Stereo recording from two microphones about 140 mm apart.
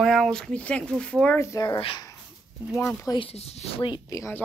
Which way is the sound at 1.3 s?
25° left (ahead or behind).